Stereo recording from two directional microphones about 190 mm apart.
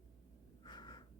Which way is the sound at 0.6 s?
20° left (ahead or behind).